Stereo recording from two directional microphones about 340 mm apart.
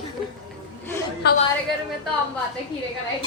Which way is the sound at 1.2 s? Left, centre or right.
Left.